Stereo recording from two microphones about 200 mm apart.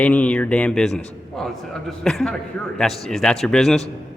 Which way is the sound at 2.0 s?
5° left (ahead or behind).